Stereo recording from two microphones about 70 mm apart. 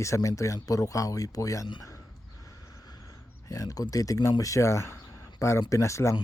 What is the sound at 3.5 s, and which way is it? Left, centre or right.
Speech, left.